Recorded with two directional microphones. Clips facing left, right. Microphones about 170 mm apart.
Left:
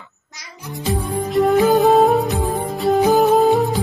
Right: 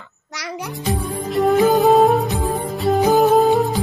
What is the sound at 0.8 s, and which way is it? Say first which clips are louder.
Music: left 2 dB; centre (ahead or behind).